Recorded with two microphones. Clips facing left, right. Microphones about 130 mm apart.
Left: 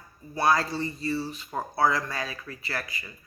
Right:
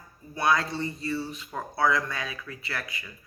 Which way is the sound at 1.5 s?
35° left (ahead or behind).